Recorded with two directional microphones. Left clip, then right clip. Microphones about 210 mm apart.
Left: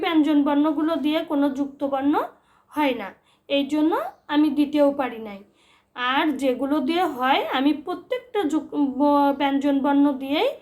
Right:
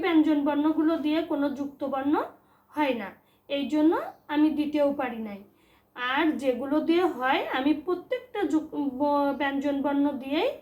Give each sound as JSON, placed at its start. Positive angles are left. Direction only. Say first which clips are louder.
{"t": 0.0, "sound": "a woman's voice", "louder": "left 3 dB", "side_deg": 45}